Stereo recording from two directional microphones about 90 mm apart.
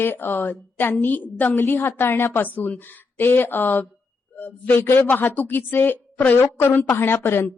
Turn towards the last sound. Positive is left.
turn(degrees=25)  # may be behind; listen again after turning